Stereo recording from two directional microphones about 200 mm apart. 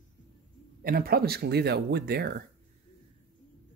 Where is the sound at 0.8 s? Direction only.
45° right (ahead or behind).